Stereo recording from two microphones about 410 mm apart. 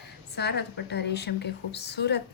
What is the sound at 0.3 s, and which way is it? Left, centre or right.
A woman's voice, left.